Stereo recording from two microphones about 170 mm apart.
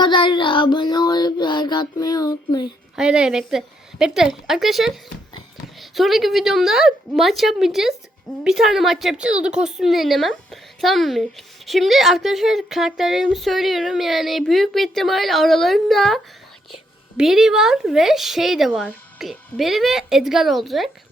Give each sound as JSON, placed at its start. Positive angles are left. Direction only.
{"t": 0.0, "sound": "child singing", "side_deg": 30}
{"t": 2.9, "sound": "a woman's voice", "side_deg": -5}